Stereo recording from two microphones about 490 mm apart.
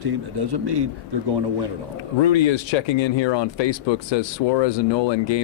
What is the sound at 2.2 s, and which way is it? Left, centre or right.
Speech, left.